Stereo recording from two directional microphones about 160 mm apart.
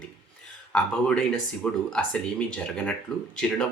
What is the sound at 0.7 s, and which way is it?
Speech, 5° left (ahead or behind).